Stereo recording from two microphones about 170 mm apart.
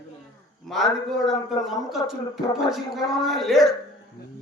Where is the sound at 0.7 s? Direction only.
Centre (ahead or behind).